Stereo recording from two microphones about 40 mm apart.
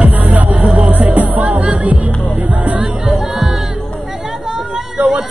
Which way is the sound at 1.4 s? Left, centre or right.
Right.